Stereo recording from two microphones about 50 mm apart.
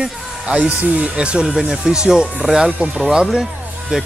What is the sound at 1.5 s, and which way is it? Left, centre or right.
Speech, centre.